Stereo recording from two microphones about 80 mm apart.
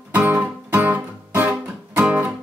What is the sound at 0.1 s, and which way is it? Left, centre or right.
Music, right.